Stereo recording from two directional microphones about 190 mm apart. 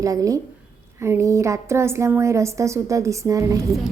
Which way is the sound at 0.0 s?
15° right (ahead or behind).